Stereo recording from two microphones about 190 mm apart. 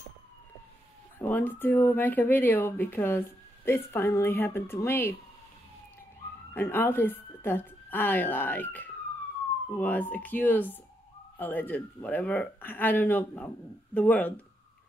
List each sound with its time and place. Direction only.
1.2 s speech: 10° left (ahead or behind)
6.5 s a woman's voice: 10° left (ahead or behind)